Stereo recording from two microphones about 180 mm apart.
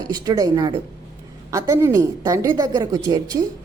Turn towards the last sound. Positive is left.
turn(degrees=-20)  # may be behind; listen again after turning